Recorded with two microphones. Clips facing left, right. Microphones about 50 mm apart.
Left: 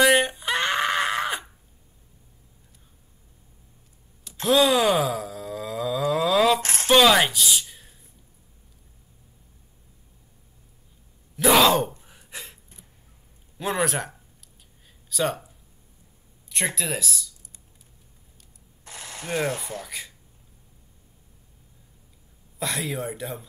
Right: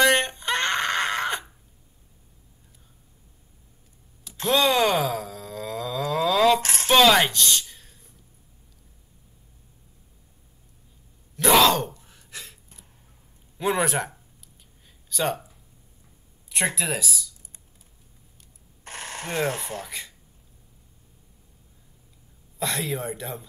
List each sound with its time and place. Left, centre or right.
0.0 s a sound: centre
4.5 s groan: centre
6.6 s a sound: left
6.9 s a sound: centre
11.3 s gasp: centre
13.6 s speech: centre
16.4 s speech: centre
18.9 s speech: right
22.6 s speech: centre